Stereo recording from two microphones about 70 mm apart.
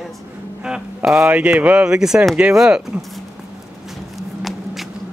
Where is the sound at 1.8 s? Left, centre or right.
Centre.